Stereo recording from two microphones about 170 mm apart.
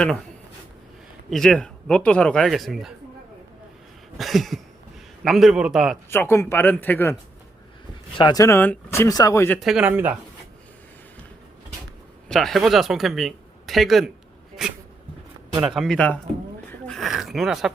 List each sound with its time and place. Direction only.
1.3 s speech: centre (ahead or behind)
4.2 s speech: centre (ahead or behind)
6.1 s speech: 15° left (ahead or behind)
8.2 s speech: 20° left (ahead or behind)
9.6 s speech: 5° right (ahead or behind)
12.3 s speech: centre (ahead or behind)
15.6 s speech: 5° right (ahead or behind)
16.8 s a sound: centre (ahead or behind)